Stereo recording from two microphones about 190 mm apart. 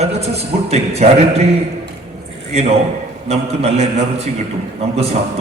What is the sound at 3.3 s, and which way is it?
A man's voice, 35° right (ahead or behind).